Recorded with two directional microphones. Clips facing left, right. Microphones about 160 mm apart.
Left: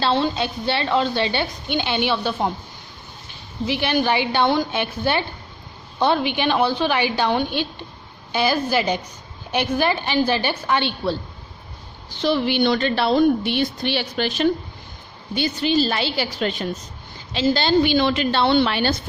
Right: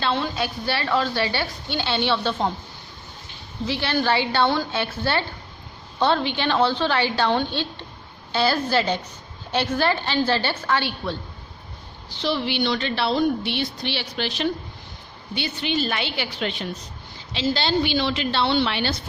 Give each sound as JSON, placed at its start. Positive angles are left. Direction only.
{"t": 0.0, "sound": "a woman's voice", "side_deg": 30}
{"t": 3.7, "sound": "a woman's voice", "side_deg": 15}
{"t": 12.1, "sound": "a woman's voice", "side_deg": 50}